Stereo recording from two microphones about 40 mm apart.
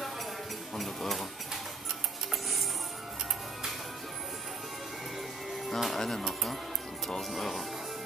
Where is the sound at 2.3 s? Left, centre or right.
Centre.